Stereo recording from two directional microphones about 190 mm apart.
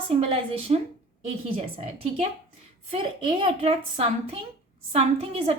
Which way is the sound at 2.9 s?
25° right (ahead or behind).